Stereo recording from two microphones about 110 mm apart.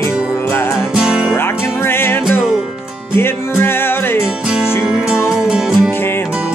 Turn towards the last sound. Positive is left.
turn(degrees=-5)  # may be behind; listen again after turning